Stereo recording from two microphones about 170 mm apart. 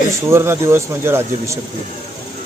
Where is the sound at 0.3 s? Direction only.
15° right (ahead or behind).